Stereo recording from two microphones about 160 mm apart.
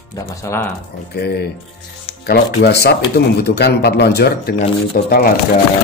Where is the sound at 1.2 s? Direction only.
90° left.